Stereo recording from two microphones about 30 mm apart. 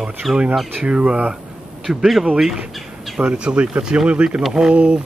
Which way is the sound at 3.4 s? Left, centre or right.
Right.